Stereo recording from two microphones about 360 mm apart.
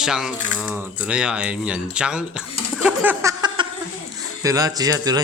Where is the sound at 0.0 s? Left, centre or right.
Centre.